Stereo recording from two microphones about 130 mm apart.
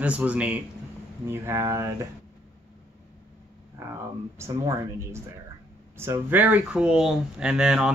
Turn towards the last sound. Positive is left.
turn(degrees=-5)  # may be behind; listen again after turning